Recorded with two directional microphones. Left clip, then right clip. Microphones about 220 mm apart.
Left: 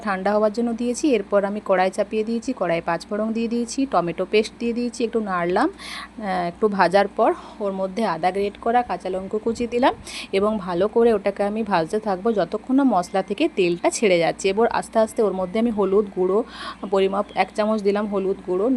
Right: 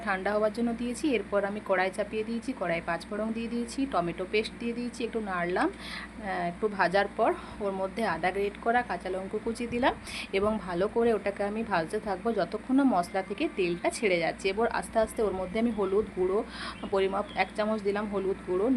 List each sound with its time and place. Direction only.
0.0 s a woman's voice: 30° left (ahead or behind)